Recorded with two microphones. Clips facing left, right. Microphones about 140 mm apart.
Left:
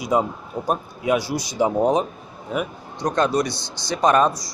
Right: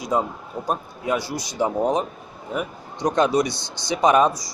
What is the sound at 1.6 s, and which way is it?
Speech, 15° left (ahead or behind).